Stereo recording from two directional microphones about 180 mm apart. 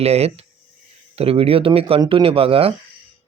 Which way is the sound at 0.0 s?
35° right (ahead or behind).